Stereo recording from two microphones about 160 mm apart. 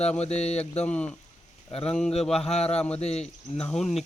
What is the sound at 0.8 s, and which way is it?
Speech, 10° left (ahead or behind).